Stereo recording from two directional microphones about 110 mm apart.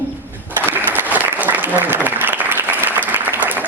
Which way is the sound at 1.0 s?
15° right (ahead or behind).